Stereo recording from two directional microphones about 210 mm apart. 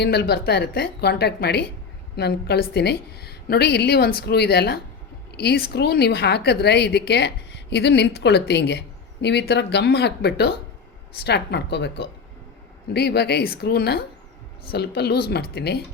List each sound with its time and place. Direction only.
0.0 s a woman's voice: 50° left (ahead or behind)